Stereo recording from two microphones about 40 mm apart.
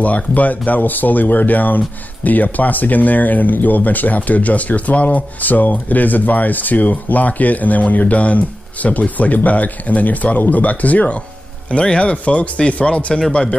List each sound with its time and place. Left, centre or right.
0.0 s speech: left